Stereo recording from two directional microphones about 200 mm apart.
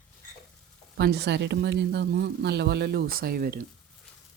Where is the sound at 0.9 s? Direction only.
55° right (ahead or behind).